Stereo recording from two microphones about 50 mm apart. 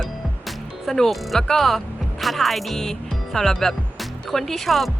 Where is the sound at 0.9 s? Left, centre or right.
Centre.